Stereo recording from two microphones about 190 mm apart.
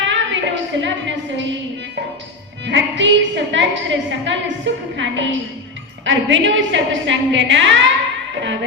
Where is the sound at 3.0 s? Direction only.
75° right (ahead or behind).